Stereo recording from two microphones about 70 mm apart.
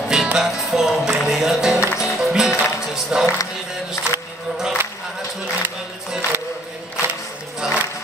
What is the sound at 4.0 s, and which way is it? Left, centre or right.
Music, left.